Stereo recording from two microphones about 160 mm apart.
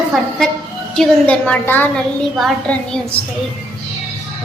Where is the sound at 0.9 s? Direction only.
10° left (ahead or behind).